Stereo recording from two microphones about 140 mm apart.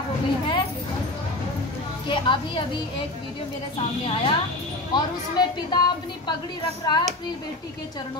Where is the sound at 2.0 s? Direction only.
35° left (ahead or behind).